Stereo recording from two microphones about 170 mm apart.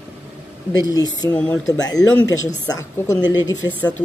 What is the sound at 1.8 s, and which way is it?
Speech, 20° left (ahead or behind).